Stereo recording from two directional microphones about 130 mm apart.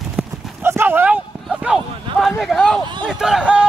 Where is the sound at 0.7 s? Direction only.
15° right (ahead or behind); by 2.8 s centre (ahead or behind).